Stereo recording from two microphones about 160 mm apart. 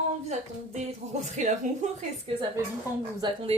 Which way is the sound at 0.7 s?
50° right (ahead or behind).